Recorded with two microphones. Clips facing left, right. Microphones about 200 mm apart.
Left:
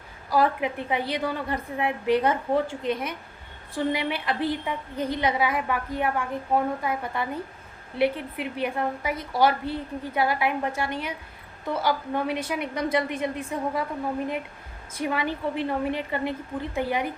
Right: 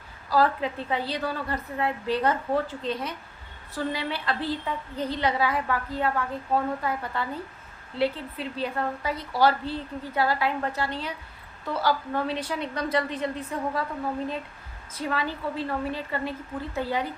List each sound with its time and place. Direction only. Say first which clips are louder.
0.3 s a woman's voice: even; 15° left (ahead or behind)
14.9 s a woman's voice: left 2 dB; 20° left (ahead or behind)